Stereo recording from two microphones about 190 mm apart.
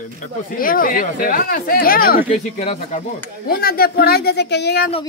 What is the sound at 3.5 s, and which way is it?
Speech, 50° left (ahead or behind).